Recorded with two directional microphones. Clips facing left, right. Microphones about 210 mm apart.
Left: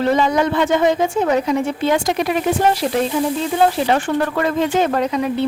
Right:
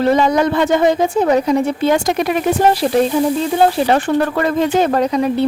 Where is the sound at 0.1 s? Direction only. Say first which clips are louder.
Right 3 dB; 40° right (ahead or behind).